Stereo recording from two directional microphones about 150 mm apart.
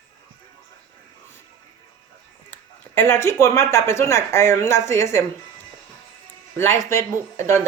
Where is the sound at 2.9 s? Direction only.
15° left (ahead or behind).